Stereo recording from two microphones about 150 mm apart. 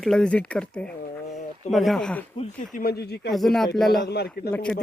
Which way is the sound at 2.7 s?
90° left.